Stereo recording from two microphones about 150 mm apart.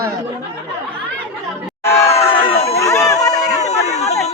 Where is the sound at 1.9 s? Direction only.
20° left (ahead or behind).